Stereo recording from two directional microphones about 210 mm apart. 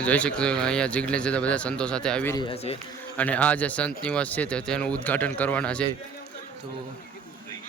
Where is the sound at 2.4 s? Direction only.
25° left (ahead or behind).